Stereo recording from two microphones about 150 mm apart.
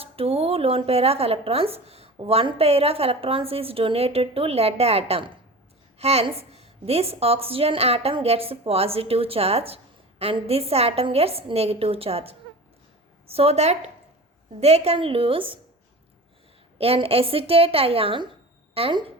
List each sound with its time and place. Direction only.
0.0 s a woman's voice: 40° right (ahead or behind)
16.7 s a woman's voice: 40° right (ahead or behind)